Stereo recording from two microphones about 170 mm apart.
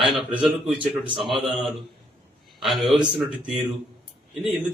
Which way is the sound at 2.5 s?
Centre (ahead or behind).